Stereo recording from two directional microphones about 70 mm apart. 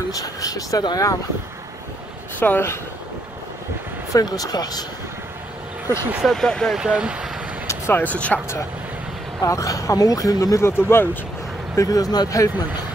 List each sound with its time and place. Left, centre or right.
0.1 s speech: left
2.4 s speech: left
4.1 s speech: left
6.2 s speech: centre
6.8 s speech: centre
7.9 s speech: left
9.4 s speech: left
10.6 s speech: left
11.7 s speech: left
12.3 s speech: left